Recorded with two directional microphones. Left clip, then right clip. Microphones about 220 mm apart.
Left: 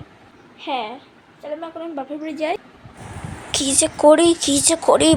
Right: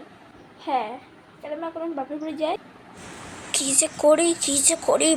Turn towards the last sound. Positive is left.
turn(degrees=15)  # may be behind; listen again after turning